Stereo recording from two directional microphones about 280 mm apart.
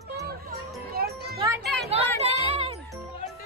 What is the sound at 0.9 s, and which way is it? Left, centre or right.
Children playing, right.